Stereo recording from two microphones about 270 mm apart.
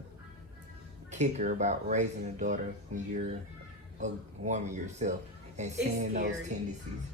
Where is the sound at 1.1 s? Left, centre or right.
Right.